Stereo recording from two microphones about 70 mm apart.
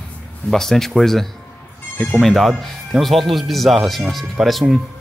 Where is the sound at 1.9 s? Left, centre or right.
Left.